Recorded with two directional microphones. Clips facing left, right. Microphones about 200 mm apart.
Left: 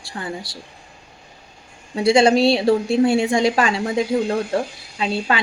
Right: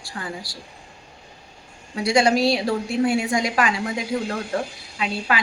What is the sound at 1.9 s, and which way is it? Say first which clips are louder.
A woman's voice: left 4 dB; 25° left (ahead or behind).